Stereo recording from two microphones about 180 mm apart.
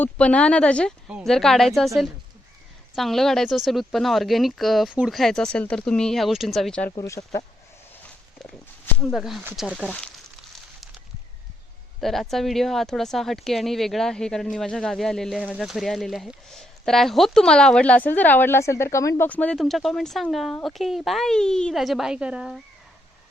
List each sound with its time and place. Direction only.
0.0 s speech: 5° left (ahead or behind)
2.9 s speech: centre (ahead or behind)
6.9 s speech: 20° left (ahead or behind)
9.0 s speech: centre (ahead or behind)
11.9 s speech: centre (ahead or behind)